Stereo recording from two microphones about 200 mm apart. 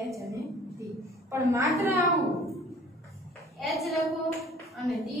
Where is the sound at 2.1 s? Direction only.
Centre (ahead or behind).